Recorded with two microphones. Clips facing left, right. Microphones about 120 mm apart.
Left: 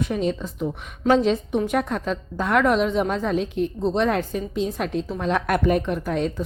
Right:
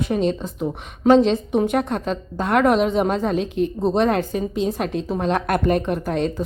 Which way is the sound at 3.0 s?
35° right (ahead or behind).